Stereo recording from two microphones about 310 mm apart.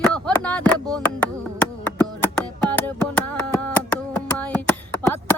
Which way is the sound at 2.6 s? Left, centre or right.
Centre.